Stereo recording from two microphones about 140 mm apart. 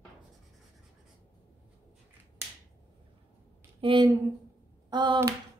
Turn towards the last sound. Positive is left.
turn(degrees=-35)  # may be behind; listen again after turning